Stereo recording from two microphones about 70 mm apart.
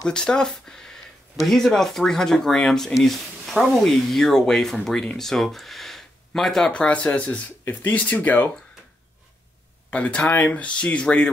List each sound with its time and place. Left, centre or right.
0.0 s speech: centre
9.8 s speech: centre